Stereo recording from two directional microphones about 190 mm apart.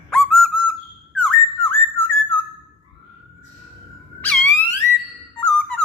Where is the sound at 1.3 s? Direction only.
10° left (ahead or behind).